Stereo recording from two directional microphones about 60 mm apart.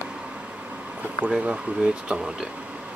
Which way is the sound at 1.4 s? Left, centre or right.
Centre.